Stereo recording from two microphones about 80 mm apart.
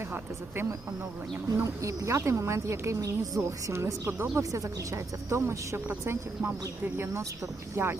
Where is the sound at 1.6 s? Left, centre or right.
Right.